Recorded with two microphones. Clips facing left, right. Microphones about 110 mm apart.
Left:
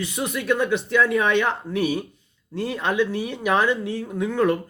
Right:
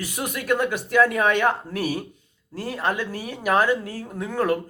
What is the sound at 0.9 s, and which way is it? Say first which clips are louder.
Speech: right 2 dB; 50° right (ahead or behind).